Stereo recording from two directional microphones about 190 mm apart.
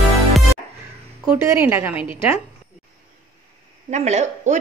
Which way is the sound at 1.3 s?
15° right (ahead or behind).